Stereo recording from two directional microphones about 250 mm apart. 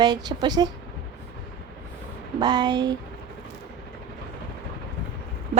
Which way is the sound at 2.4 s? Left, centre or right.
Centre.